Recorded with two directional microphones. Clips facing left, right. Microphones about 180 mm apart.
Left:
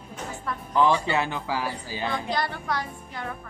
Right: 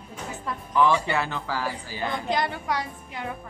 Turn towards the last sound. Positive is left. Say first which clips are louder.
# right 1 dB
turn(degrees=-15)  # may be behind; listen again after turning